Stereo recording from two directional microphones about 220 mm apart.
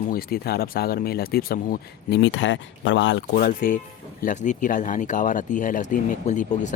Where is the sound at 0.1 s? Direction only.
45° left (ahead or behind).